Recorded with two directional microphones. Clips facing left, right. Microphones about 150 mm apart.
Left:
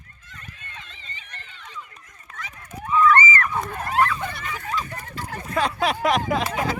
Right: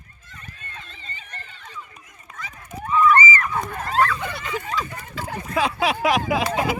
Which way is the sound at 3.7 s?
5° left (ahead or behind).